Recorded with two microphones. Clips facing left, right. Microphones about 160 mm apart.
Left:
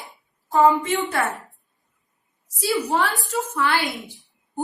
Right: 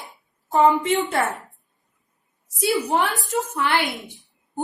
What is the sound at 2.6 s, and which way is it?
A woman's voice, 20° right (ahead or behind).